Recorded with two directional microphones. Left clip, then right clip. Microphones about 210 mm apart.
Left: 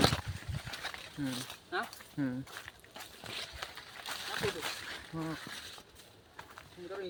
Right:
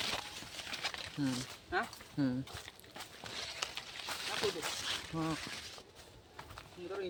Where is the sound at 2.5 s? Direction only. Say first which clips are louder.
Left 1 dB; 10° left (ahead or behind).